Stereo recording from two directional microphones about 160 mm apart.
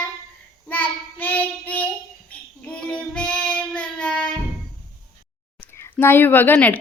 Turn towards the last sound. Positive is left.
turn(degrees=10)  # may be behind; listen again after turning